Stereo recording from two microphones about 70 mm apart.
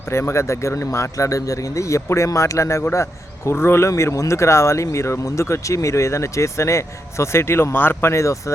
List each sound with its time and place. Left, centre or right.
0.1 s a man's voice: left